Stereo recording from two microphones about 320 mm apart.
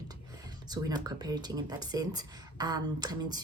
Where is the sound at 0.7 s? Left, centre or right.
Centre.